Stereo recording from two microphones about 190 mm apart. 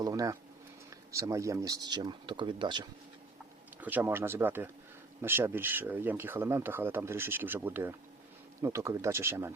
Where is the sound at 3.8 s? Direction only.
10° right (ahead or behind).